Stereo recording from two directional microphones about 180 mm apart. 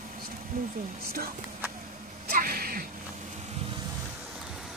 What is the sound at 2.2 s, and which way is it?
Sneeze, 55° right (ahead or behind).